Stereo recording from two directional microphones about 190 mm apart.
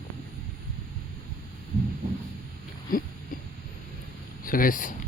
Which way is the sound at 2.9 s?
50° left (ahead or behind).